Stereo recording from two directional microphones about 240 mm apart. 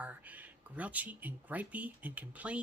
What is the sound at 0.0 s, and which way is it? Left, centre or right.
Speech, centre.